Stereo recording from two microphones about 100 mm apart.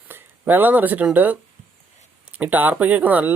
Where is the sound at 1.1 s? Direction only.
15° right (ahead or behind).